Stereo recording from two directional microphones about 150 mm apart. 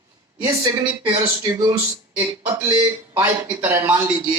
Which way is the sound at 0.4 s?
15° right (ahead or behind).